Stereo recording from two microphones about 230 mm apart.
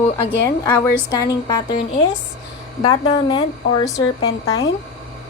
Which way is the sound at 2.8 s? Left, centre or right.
Centre.